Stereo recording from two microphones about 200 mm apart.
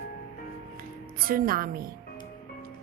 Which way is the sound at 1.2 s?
45° right (ahead or behind).